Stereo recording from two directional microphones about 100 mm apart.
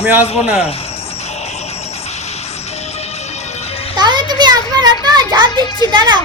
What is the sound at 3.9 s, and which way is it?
Children playing, 45° right (ahead or behind).